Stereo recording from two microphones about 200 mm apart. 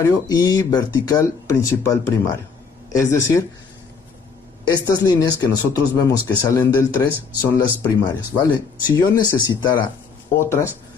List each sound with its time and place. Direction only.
0.0 s speech: 15° left (ahead or behind)
4.7 s speech: 20° left (ahead or behind)